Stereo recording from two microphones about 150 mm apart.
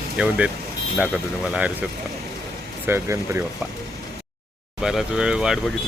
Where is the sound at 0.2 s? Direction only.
10° right (ahead or behind).